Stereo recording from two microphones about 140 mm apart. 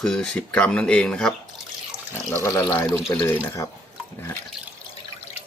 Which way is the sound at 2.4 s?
15° left (ahead or behind).